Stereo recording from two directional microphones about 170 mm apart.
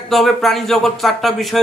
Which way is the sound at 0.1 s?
Centre (ahead or behind).